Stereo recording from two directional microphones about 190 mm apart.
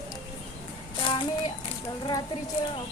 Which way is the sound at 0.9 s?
25° left (ahead or behind).